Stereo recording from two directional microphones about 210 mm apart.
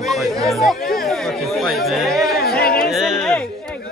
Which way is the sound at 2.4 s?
45° left (ahead or behind).